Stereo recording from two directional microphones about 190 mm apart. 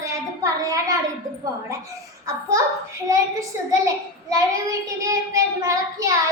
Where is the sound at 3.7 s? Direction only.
15° right (ahead or behind).